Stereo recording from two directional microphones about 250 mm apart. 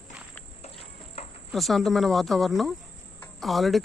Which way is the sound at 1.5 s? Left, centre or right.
Centre.